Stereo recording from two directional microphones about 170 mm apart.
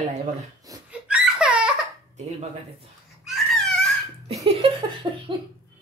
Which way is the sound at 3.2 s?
Centre (ahead or behind).